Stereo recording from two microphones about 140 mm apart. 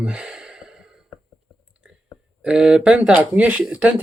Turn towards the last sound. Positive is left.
turn(degrees=-10)  # may be behind; listen again after turning